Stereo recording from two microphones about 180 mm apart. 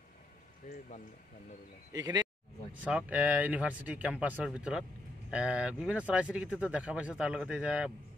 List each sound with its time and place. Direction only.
0.7 s speech: 45° left (ahead or behind)
1.9 s speech: 20° right (ahead or behind)
2.9 s speech: 5° right (ahead or behind)